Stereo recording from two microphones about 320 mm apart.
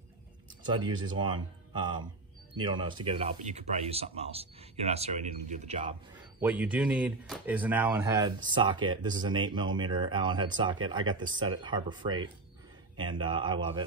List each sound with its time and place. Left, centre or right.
0.7 s speech: centre
6.1 s speech: centre